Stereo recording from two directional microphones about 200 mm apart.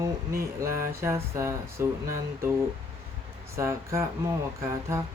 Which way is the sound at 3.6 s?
15° right (ahead or behind).